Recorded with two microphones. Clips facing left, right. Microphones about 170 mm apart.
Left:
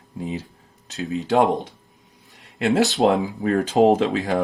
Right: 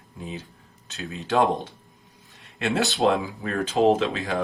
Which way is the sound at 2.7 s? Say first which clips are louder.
Left 5 dB; 20° left (ahead or behind).